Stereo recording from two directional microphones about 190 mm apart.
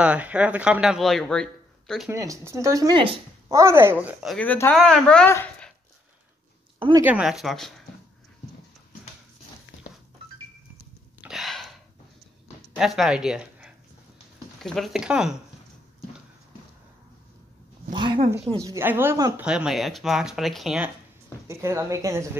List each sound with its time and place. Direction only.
0.0 s speech: 5° right (ahead or behind)
2.0 s speech: 15° right (ahead or behind); by 5.7 s 10° left (ahead or behind)
7.0 s speech: 5° right (ahead or behind)
11.1 s a sound: centre (ahead or behind)
12.7 s speech: centre (ahead or behind)
17.9 s a sound: 25° right (ahead or behind)
18.5 s speech: 15° right (ahead or behind)
21.5 s speech: 15° right (ahead or behind)